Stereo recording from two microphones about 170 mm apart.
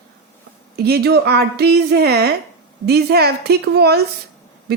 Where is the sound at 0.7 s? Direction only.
70° right (ahead or behind).